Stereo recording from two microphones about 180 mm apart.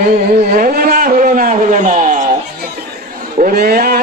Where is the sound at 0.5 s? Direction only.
50° right (ahead or behind).